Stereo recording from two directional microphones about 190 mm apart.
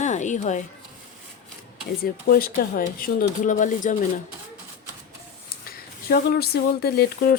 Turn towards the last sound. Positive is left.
turn(degrees=55)  # may be behind; listen again after turning